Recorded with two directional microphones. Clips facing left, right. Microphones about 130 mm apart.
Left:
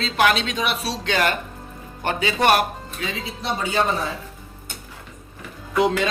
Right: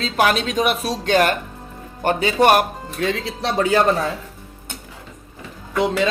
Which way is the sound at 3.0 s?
70° right (ahead or behind).